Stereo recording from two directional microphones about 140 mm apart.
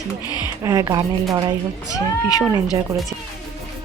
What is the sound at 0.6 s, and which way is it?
Speech, 25° right (ahead or behind).